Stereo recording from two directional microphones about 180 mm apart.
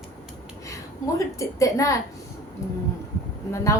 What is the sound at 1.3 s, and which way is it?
Speech, 20° left (ahead or behind).